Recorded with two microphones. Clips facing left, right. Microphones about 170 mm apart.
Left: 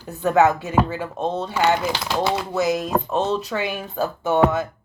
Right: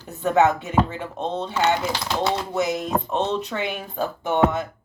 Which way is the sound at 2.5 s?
20° right (ahead or behind).